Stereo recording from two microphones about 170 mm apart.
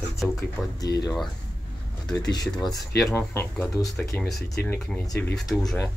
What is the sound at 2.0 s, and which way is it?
Speech, 25° left (ahead or behind).